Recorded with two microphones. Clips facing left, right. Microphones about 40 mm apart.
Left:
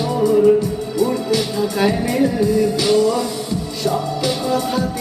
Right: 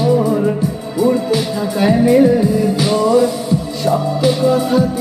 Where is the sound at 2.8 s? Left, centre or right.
Right.